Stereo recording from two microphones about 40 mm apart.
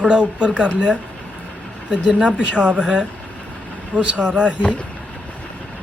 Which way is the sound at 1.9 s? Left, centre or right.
Right.